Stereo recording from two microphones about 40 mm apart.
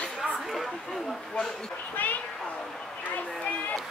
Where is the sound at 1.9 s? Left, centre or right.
Left.